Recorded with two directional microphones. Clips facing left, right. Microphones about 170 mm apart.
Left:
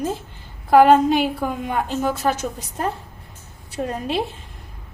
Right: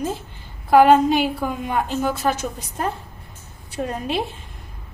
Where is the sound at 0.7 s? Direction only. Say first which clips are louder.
Even; 40° left (ahead or behind).